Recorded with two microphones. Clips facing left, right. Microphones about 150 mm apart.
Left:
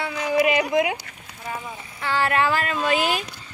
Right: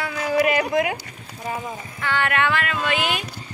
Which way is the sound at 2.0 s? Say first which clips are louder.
Left 1 dB; 35° left (ahead or behind).